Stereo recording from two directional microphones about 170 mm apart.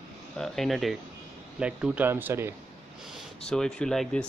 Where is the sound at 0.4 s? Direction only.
Centre (ahead or behind).